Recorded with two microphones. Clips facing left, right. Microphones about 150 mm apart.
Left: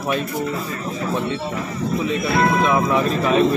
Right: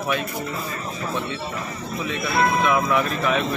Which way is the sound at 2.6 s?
30° left (ahead or behind).